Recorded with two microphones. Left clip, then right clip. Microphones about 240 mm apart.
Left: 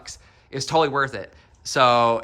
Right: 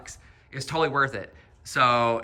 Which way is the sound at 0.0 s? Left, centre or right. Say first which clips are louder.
Left 4 dB; centre.